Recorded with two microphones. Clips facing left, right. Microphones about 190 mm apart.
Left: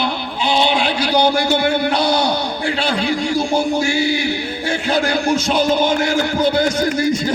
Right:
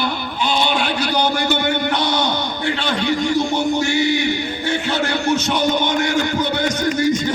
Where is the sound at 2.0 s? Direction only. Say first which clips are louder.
Left 3 dB; 35° left (ahead or behind).